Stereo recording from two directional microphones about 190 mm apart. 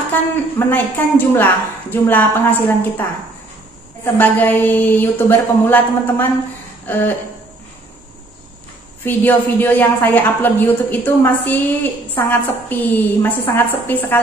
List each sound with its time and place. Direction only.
0.1 s a woman's voice: 10° left (ahead or behind)
9.0 s a woman's voice: 10° left (ahead or behind)